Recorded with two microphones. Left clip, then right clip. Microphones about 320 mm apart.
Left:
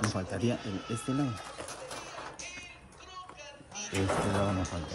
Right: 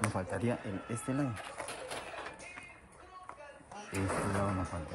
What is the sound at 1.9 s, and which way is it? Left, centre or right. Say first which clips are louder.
Music: even; right.